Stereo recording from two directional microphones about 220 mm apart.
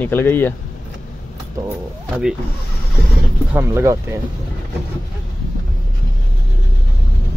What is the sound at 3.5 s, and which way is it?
Speech, 15° right (ahead or behind).